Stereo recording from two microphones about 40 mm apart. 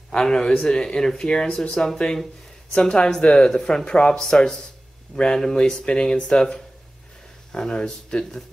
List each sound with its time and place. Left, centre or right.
0.2 s speech: centre
7.5 s speech: centre